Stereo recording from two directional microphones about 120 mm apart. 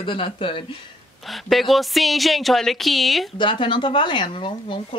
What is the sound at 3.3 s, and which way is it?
Speech, 40° left (ahead or behind).